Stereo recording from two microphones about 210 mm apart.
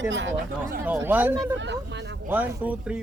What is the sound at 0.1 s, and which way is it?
Speech, 65° right (ahead or behind).